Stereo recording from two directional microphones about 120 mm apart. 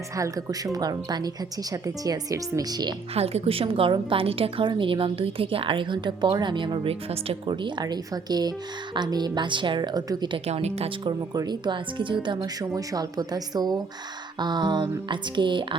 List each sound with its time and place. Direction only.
0.2 s speech: 30° right (ahead or behind)
3.2 s a woman's voice: 55° right (ahead or behind); by 10.2 s 35° right (ahead or behind)
10.3 s speech: 60° right (ahead or behind)
11.0 s speech: 35° right (ahead or behind)